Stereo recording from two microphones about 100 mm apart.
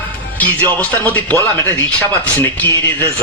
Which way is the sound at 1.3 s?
25° left (ahead or behind).